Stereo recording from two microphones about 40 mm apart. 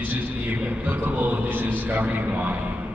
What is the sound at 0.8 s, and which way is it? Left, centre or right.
A man's voice, right.